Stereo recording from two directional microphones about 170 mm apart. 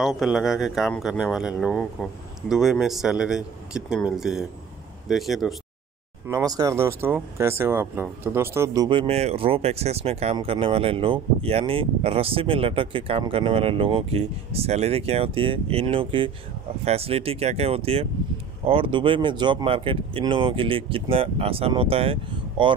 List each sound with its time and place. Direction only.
0.0 s speech: centre (ahead or behind)
6.2 s speech: 20° right (ahead or behind)